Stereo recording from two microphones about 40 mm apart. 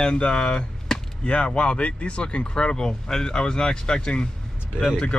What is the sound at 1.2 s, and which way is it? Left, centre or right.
Speech, left.